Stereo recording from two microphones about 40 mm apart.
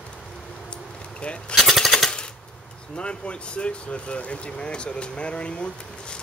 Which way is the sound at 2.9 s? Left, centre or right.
Left.